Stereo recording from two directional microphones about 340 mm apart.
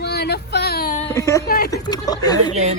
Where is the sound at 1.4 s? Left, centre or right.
Left.